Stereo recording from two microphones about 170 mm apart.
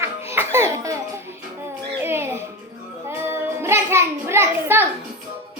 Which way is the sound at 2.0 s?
15° right (ahead or behind).